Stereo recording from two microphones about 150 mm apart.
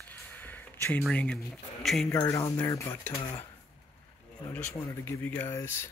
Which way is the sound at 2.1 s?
20° left (ahead or behind).